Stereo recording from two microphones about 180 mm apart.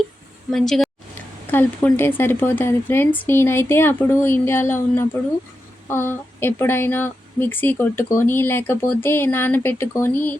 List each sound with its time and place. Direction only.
0.5 s a woman's voice: centre (ahead or behind)